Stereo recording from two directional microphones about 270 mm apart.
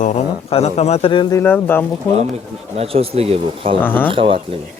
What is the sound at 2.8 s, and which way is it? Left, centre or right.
Speech, right.